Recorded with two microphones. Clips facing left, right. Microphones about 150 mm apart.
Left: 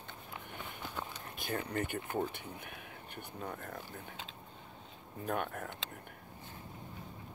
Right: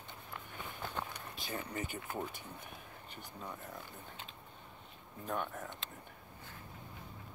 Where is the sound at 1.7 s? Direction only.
60° left (ahead or behind).